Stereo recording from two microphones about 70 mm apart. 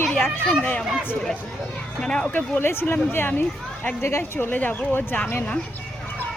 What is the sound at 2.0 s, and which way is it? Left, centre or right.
Speech, centre.